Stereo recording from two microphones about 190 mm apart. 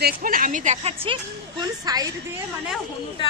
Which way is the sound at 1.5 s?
20° right (ahead or behind).